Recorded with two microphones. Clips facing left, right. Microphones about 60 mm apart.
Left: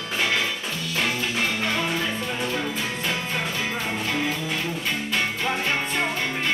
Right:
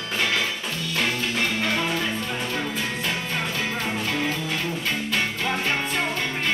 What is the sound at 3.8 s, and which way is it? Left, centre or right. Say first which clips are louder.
Music: even; centre.